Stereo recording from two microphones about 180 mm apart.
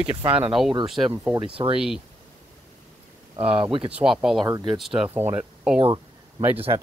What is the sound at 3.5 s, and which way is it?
Speech, 30° right (ahead or behind).